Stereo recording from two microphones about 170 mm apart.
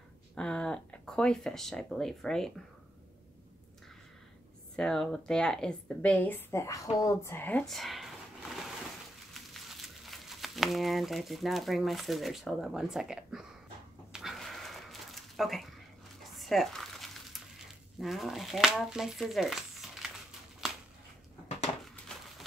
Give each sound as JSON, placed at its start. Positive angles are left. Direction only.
{"t": 0.4, "sound": "speech", "side_deg": 5}
{"t": 4.7, "sound": "a woman's voice", "side_deg": 0}
{"t": 14.1, "sound": "a sound", "side_deg": 0}